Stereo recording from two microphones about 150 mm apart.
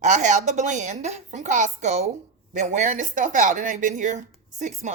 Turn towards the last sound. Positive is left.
turn(degrees=-55)  # may be behind; listen again after turning